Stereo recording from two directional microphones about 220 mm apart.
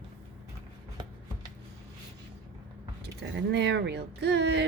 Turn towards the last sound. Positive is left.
turn(degrees=-50)  # may be behind; listen again after turning